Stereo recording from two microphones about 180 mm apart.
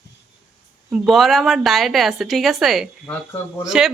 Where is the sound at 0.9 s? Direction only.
Centre (ahead or behind).